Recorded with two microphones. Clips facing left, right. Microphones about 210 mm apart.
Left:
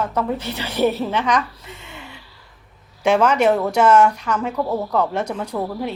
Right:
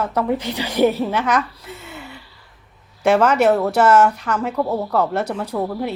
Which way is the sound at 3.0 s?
5° right (ahead or behind).